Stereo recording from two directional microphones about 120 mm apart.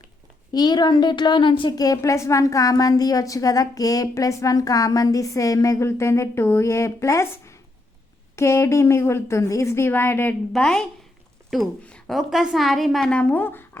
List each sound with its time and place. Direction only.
0.5 s a woman's voice: 35° left (ahead or behind); by 10.3 s 20° left (ahead or behind)
10.5 s speech: 5° left (ahead or behind)